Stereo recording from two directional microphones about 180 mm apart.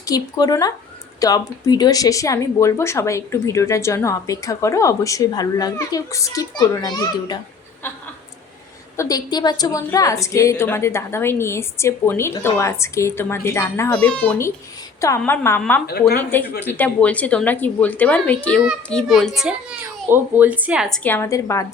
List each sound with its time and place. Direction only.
0.0 s speech: 20° left (ahead or behind)
9.0 s speech: 20° left (ahead or behind)
15.9 s speech: 60° left (ahead or behind)
16.3 s a child's voice: 10° left (ahead or behind)
21.0 s speech: 10° left (ahead or behind)